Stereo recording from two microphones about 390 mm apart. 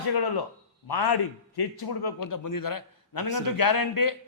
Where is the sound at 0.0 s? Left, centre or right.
Left.